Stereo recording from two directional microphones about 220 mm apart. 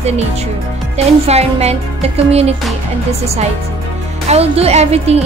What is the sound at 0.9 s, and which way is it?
Speech, 30° right (ahead or behind).